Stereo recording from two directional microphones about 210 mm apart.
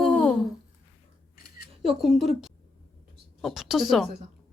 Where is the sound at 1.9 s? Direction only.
Centre (ahead or behind).